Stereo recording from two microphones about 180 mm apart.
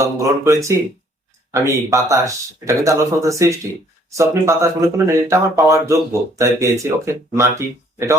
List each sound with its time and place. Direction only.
0.0 s speech: 15° right (ahead or behind)